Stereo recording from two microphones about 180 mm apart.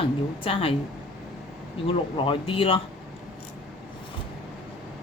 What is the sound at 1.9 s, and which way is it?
Speech, 30° left (ahead or behind).